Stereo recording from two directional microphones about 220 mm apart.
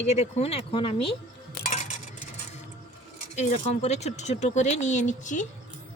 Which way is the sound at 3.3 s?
30° left (ahead or behind).